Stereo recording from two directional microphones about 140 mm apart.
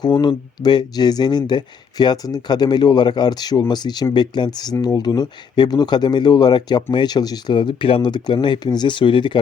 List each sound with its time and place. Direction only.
0.0 s speech: 30° left (ahead or behind)